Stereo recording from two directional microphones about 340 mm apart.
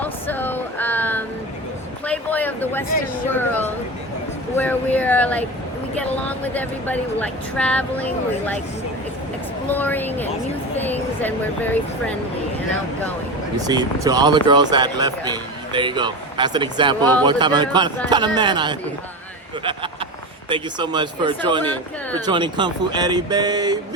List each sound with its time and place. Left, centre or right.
0.0 s a sound: centre
4.5 s speech: centre
9.6 s speech: centre
13.7 s speech: centre
20.5 s speech: centre